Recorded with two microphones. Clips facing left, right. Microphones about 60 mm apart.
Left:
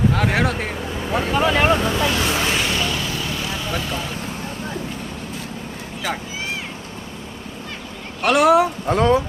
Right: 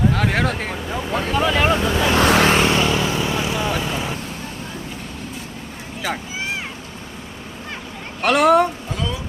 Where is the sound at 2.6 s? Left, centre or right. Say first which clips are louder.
Right 5 dB; right.